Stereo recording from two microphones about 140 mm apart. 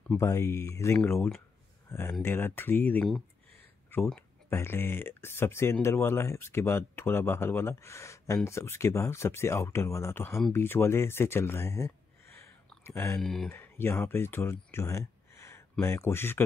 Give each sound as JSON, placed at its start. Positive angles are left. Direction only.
{"t": 0.2, "sound": "speech", "side_deg": 20}
{"t": 13.2, "sound": "speech", "side_deg": 5}
{"t": 13.5, "sound": "speech", "side_deg": 15}